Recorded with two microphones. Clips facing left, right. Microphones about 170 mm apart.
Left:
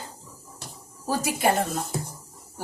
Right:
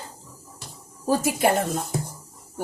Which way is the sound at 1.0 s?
45° right (ahead or behind).